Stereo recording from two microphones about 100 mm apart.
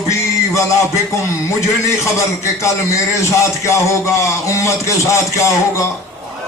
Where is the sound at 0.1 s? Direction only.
30° left (ahead or behind).